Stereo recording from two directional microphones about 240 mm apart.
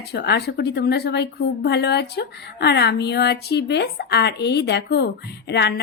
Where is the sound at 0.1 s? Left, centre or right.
Left.